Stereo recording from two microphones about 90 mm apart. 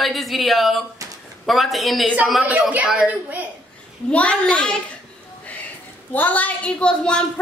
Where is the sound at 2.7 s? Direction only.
15° right (ahead or behind).